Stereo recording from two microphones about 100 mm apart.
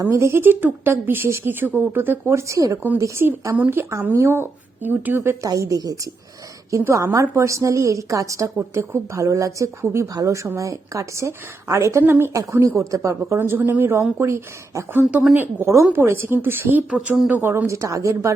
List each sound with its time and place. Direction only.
0.0 s a woman's voice: 25° right (ahead or behind)
12.3 s a woman's voice: 35° right (ahead or behind)
15.1 s speech: 15° right (ahead or behind)
15.6 s speech: 30° right (ahead or behind)